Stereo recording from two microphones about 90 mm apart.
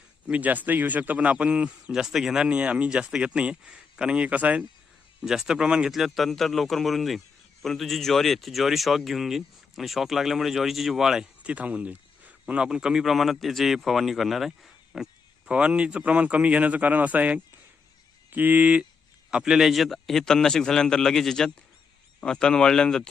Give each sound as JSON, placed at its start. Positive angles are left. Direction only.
{"t": 0.3, "sound": "speech", "side_deg": -15}
{"t": 5.2, "sound": "speech", "side_deg": -5}
{"t": 15.4, "sound": "speech", "side_deg": -10}